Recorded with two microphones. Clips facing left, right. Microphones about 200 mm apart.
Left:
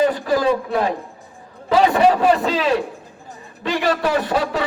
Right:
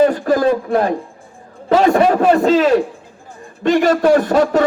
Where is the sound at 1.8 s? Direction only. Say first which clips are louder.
Right 2 dB; 45° right (ahead or behind).